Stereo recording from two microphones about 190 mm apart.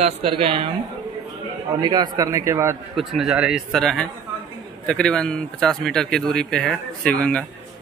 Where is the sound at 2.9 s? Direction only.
Centre (ahead or behind).